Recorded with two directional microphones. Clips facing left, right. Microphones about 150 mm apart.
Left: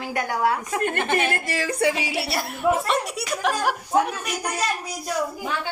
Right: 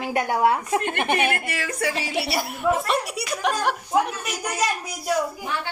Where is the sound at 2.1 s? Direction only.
Centre (ahead or behind).